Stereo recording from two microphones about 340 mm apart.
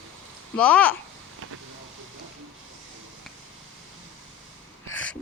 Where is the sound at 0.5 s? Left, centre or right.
Centre.